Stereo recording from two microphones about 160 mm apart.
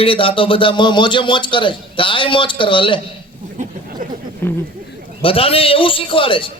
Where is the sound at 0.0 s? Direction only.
35° left (ahead or behind).